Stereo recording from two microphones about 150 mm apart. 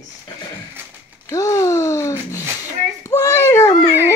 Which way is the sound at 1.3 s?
20° left (ahead or behind).